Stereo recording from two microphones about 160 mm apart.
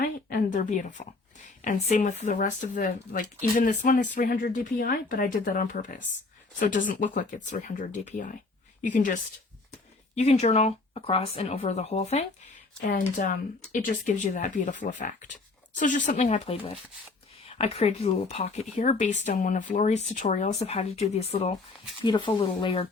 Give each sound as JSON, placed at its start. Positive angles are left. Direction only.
{"t": 0.0, "sound": "a sound", "side_deg": 90}
{"t": 0.5, "sound": "speech", "side_deg": 55}
{"t": 10.2, "sound": "speech", "side_deg": 45}
{"t": 13.1, "sound": "speech", "side_deg": 60}
{"t": 22.0, "sound": "speech", "side_deg": 30}